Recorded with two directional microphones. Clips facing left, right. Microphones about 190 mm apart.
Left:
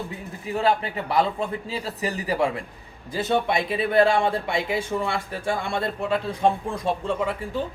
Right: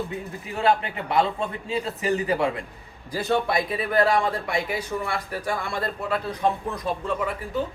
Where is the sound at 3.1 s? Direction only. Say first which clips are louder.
Left 1 dB; 20° left (ahead or behind).